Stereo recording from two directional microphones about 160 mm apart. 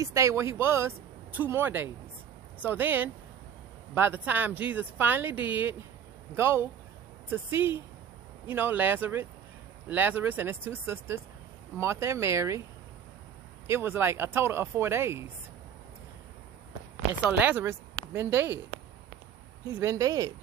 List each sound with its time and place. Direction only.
0.0 s speech: 20° right (ahead or behind)
13.7 s speech: 15° right (ahead or behind)
17.3 s speech: 10° right (ahead or behind)
19.7 s speech: 20° right (ahead or behind)